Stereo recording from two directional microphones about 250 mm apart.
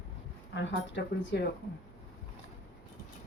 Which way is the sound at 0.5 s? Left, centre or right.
Left.